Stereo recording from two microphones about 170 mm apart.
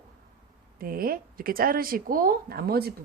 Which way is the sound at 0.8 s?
60° right (ahead or behind).